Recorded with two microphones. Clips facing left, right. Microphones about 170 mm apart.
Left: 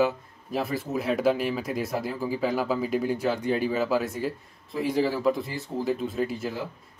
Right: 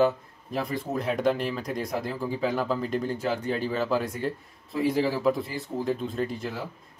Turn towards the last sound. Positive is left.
turn(degrees=5)  # may be behind; listen again after turning